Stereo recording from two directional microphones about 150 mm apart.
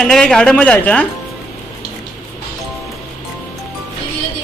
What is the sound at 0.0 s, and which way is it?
A man's voice, 5° left (ahead or behind).